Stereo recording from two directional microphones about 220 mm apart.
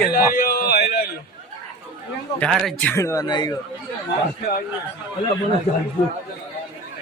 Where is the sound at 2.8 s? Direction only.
10° left (ahead or behind).